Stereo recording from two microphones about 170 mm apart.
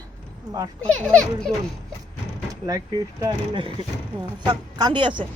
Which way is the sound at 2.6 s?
20° right (ahead or behind).